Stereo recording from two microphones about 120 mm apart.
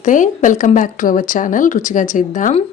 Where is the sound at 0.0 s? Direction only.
90° left.